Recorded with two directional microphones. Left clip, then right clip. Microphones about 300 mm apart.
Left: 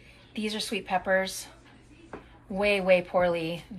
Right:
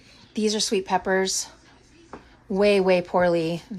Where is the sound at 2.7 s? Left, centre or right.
Centre.